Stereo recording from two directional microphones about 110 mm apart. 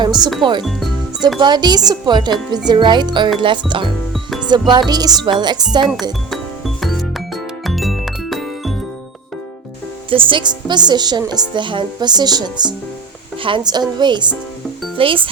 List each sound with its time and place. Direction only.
0.0 s speech: 40° right (ahead or behind)
1.4 s speech: 40° right (ahead or behind)
5.8 s speech: centre (ahead or behind)
6.3 s music: centre (ahead or behind)
10.1 s speech: 50° right (ahead or behind)
14.9 s speech: 55° right (ahead or behind)